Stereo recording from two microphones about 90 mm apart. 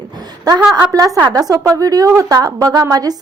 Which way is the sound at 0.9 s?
40° right (ahead or behind).